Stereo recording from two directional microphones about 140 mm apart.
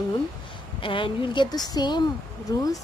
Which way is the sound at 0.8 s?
40° left (ahead or behind).